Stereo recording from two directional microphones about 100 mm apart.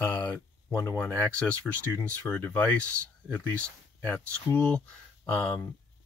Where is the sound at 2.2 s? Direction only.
15° left (ahead or behind).